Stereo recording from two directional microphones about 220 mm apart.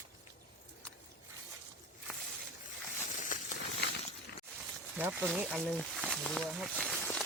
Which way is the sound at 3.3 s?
35° left (ahead or behind).